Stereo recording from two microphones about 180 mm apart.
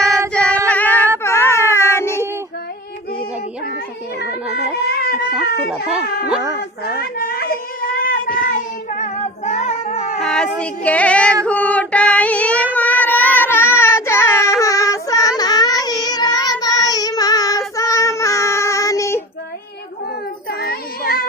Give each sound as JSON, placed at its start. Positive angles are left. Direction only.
{"t": 0.3, "sound": "singing", "side_deg": 10}
{"t": 1.2, "sound": "baby cry", "side_deg": 15}
{"t": 4.8, "sound": "a sound", "side_deg": 60}
{"t": 5.7, "sound": "speech", "side_deg": -5}
{"t": 6.6, "sound": "a sound", "side_deg": 55}
{"t": 10.2, "sound": "child singing", "side_deg": 5}
{"t": 11.4, "sound": "female singing", "side_deg": 10}
{"t": 12.7, "sound": "baby cry", "side_deg": 10}
{"t": 13.8, "sound": "child singing", "side_deg": 15}
{"t": 20.5, "sound": "child singing", "side_deg": 60}